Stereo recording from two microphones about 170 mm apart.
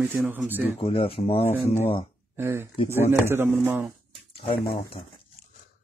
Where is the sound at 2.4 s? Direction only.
15° right (ahead or behind).